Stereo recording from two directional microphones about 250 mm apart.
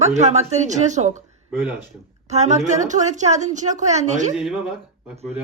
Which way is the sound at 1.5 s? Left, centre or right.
Centre.